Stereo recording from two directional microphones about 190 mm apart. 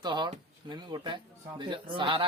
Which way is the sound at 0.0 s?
25° right (ahead or behind).